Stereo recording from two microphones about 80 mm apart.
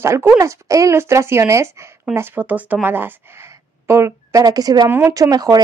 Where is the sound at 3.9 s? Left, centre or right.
Right.